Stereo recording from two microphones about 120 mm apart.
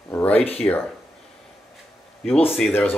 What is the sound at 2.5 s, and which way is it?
Speech, 5° left (ahead or behind).